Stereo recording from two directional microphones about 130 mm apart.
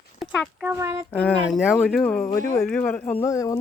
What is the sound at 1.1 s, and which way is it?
Speech, 10° left (ahead or behind).